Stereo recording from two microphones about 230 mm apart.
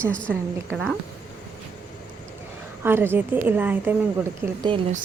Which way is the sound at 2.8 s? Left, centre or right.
Centre.